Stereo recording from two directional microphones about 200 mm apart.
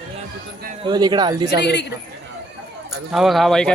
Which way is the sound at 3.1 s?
Centre (ahead or behind).